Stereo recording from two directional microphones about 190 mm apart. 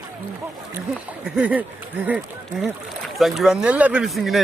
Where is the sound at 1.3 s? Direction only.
5° right (ahead or behind).